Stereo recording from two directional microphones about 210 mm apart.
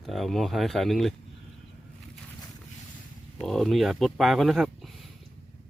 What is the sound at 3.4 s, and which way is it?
Speech, centre (ahead or behind).